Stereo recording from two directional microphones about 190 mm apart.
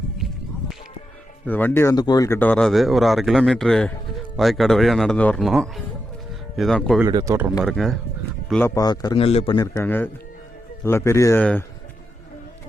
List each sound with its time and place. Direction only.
1.5 s speech: 10° left (ahead or behind)
7.1 s speech: 20° right (ahead or behind)
7.6 s speech: centre (ahead or behind)
8.6 s a man's voice: 20° left (ahead or behind)
9.6 s a man's voice: 15° left (ahead or behind)